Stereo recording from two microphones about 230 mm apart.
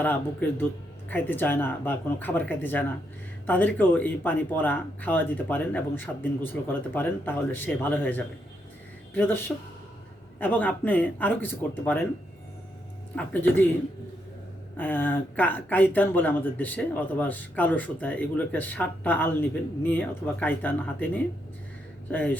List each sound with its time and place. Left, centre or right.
0.0 s speech: centre
10.4 s speech: centre
13.1 s speech: centre
14.8 s speech: centre